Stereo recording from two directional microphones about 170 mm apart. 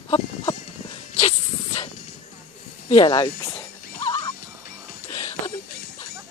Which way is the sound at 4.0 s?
20° left (ahead or behind).